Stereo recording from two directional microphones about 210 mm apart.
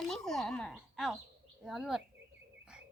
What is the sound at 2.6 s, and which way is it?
Bird, 5° right (ahead or behind).